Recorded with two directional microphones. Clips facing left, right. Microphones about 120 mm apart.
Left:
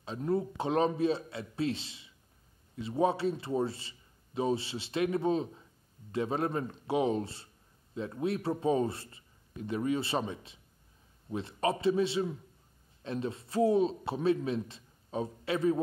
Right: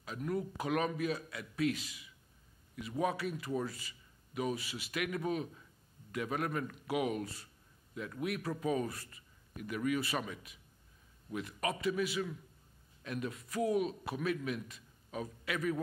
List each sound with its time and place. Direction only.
0.0 s a man's voice: 30° left (ahead or behind)